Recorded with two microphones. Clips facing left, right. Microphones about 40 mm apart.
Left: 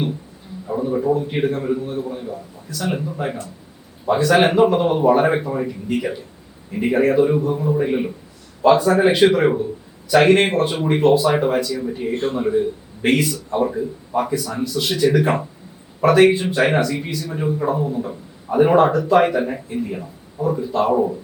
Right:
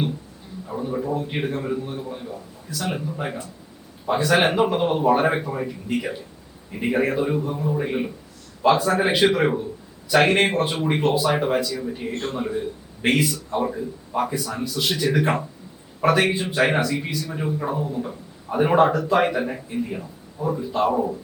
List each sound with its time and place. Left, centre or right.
0.7 s speech: centre